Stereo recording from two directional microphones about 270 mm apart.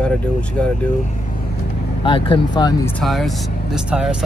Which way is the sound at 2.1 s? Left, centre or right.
Centre.